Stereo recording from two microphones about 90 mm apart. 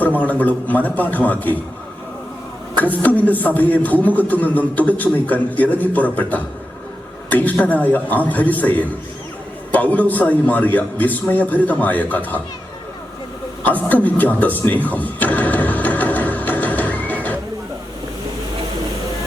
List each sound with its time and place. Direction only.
0.0 s a man's voice: 20° left (ahead or behind)
2.7 s a man's voice: 20° left (ahead or behind)
13.7 s music: 20° left (ahead or behind)